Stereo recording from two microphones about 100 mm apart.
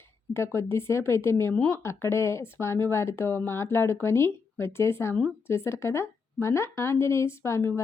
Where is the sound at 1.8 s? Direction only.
25° left (ahead or behind).